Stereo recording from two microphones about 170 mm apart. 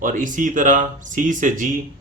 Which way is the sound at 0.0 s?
50° right (ahead or behind).